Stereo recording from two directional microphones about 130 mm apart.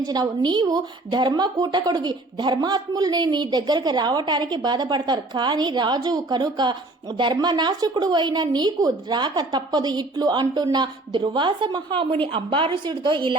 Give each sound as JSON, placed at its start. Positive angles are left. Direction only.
{"t": 0.0, "sound": "speech", "side_deg": -30}